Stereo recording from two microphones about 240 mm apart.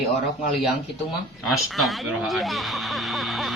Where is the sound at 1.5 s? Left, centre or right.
Centre.